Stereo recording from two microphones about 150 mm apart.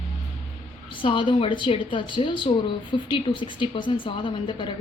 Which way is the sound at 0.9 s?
35° left (ahead or behind).